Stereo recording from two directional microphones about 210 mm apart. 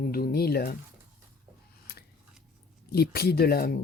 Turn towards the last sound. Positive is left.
turn(degrees=45)  # may be behind; listen again after turning